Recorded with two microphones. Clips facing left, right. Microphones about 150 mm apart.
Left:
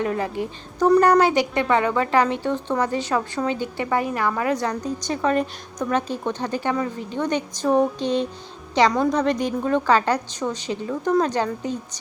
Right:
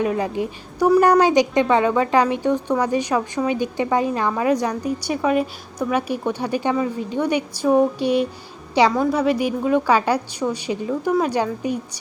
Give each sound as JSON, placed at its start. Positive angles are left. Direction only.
{"t": 0.0, "sound": "a woman's voice", "side_deg": -15}